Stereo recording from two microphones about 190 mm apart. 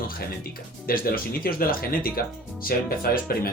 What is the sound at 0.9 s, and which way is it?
Speech, 50° left (ahead or behind).